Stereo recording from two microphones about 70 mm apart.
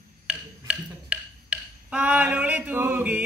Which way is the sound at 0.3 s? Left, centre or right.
Centre.